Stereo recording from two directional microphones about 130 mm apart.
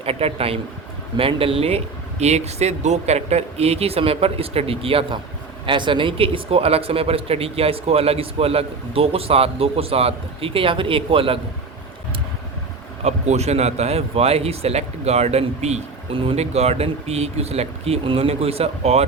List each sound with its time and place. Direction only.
0.0 s speech: 50° right (ahead or behind)
13.1 s speech: 55° right (ahead or behind)